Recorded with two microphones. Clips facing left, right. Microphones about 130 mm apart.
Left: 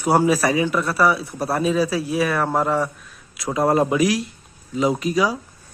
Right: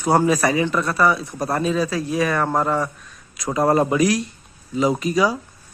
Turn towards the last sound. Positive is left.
turn(degrees=0)  # may be behind; listen again after turning